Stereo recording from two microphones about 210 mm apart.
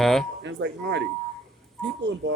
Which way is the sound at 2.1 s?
60° right (ahead or behind).